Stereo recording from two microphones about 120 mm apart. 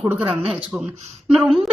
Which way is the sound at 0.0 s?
15° right (ahead or behind).